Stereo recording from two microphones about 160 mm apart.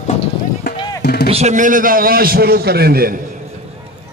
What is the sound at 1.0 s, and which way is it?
Music, 80° left.